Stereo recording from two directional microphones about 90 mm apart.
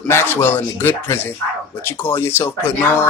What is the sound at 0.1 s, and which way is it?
Speech, 30° left (ahead or behind).